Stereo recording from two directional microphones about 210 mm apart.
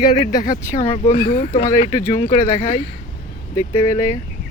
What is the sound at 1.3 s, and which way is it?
Speech, 40° left (ahead or behind).